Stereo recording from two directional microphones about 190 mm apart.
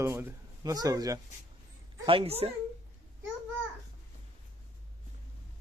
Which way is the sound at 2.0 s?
30° right (ahead or behind).